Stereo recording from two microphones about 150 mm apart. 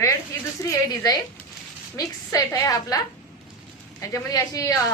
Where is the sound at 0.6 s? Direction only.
25° left (ahead or behind).